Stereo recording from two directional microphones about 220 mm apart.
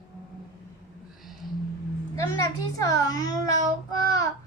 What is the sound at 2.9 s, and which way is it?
Child singing, 15° left (ahead or behind).